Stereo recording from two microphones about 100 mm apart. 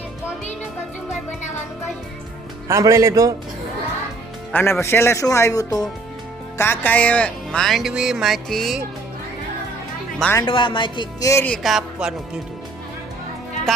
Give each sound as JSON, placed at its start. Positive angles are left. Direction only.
{"t": 2.6, "sound": "speech", "side_deg": -30}
{"t": 4.5, "sound": "speech", "side_deg": 25}
{"t": 6.6, "sound": "speech", "side_deg": 20}
{"t": 10.4, "sound": "speech", "side_deg": 60}
{"t": 11.2, "sound": "speech", "side_deg": 30}
{"t": 11.6, "sound": "speech", "side_deg": -5}
{"t": 13.7, "sound": "music", "side_deg": 5}